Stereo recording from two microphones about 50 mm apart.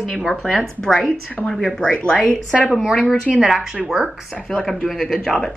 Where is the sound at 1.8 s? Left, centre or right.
Left.